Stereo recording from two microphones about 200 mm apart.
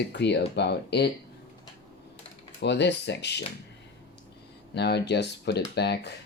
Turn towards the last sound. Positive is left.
turn(degrees=55)  # may be behind; listen again after turning